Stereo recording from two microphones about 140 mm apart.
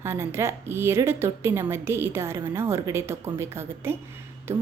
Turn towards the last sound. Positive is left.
turn(degrees=-15)  # may be behind; listen again after turning